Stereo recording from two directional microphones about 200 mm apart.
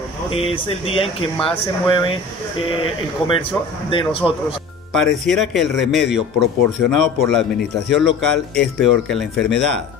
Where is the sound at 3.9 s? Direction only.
25° left (ahead or behind).